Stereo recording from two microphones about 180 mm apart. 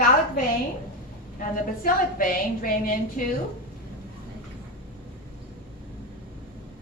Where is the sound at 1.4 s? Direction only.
50° left (ahead or behind).